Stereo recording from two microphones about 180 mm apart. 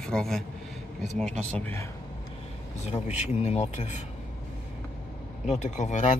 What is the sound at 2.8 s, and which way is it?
Speech, 40° left (ahead or behind).